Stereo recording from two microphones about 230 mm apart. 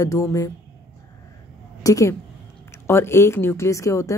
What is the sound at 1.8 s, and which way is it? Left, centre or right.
A woman's voice, centre.